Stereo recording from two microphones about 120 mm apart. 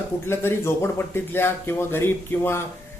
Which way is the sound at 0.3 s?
20° left (ahead or behind).